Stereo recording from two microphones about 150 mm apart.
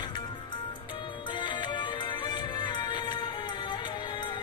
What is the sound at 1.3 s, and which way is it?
Music, 30° left (ahead or behind).